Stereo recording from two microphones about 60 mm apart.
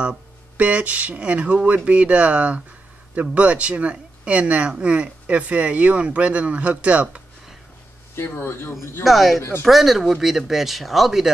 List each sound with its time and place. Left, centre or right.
0.6 s speech: right
8.2 s speech: left
9.0 s speech: centre